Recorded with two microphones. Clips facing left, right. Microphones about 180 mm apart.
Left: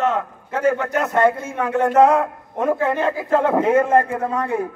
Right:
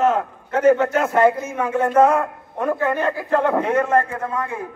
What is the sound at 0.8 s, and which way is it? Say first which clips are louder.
Speech: right 1 dB; 25° right (ahead or behind).